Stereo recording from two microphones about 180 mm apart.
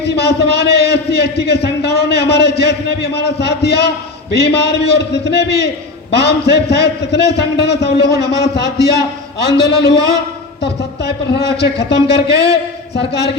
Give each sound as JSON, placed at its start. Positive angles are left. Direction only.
{"t": 0.0, "sound": "a man's voice", "side_deg": 65}